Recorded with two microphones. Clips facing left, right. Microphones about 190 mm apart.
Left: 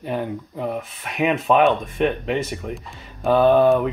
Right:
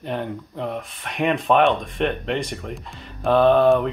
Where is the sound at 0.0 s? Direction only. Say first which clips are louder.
Left 2 dB; 5° left (ahead or behind).